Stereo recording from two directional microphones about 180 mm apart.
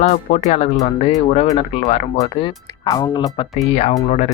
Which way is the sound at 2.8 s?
25° left (ahead or behind).